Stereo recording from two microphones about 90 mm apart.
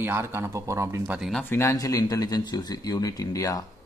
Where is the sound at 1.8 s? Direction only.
45° left (ahead or behind).